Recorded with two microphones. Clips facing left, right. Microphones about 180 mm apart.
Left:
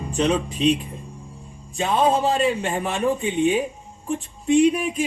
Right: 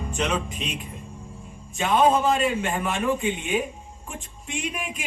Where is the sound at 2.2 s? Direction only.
35° left (ahead or behind).